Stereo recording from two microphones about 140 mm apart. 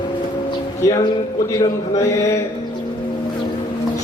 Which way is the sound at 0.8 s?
20° left (ahead or behind).